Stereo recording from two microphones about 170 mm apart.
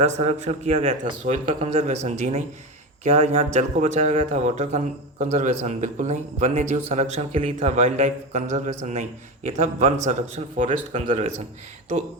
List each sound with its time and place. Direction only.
0.0 s a man's voice: 40° right (ahead or behind)
11.0 s speech: 35° right (ahead or behind)